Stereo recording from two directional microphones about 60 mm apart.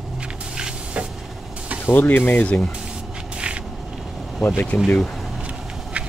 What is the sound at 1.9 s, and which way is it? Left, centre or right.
Speech, left.